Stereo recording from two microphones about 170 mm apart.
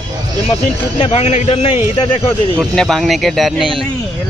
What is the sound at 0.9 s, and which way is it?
Speech, 40° left (ahead or behind).